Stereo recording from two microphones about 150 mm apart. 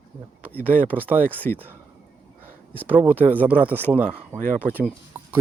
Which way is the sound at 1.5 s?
65° right (ahead or behind).